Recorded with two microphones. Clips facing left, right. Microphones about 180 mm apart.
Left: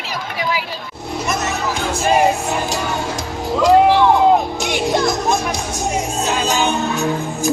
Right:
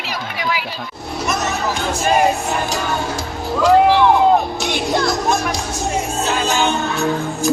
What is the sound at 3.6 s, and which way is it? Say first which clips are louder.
Music: even; 15° left (ahead or behind).